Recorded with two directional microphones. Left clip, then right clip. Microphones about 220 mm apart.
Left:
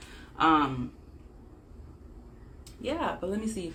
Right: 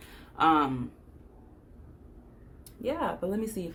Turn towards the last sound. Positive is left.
turn(degrees=-50)  # may be behind; listen again after turning